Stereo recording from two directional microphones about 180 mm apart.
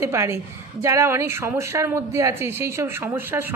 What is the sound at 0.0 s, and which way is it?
Speech, 15° right (ahead or behind).